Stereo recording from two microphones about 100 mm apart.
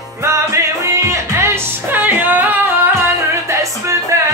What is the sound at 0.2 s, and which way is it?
Music, 30° right (ahead or behind).